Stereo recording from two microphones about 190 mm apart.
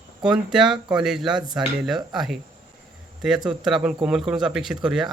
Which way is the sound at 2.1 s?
Centre (ahead or behind).